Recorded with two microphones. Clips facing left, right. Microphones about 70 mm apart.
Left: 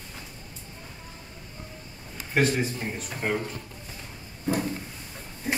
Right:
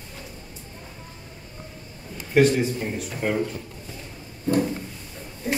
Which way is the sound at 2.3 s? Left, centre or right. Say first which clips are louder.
Right 6 dB; centre.